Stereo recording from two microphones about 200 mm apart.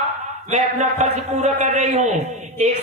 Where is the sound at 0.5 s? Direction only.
35° right (ahead or behind).